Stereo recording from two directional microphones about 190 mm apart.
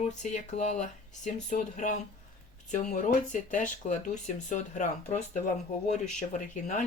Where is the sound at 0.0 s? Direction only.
40° left (ahead or behind).